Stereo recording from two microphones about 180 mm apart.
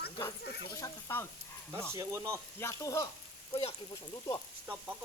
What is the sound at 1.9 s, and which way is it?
Speech, 15° right (ahead or behind).